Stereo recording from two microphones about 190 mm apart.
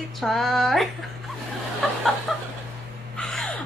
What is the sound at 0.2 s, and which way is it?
Speech, centre (ahead or behind).